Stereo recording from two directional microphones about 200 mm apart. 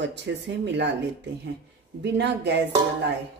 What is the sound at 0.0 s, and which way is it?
Speech, 60° right (ahead or behind).